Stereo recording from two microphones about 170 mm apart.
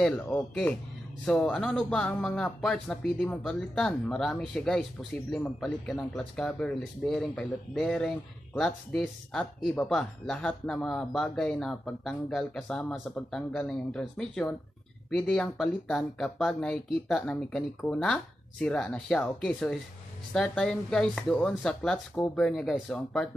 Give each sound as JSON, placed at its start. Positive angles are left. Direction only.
{"t": 0.0, "sound": "speech", "side_deg": 5}